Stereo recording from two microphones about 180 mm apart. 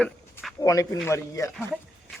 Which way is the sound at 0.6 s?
20° left (ahead or behind).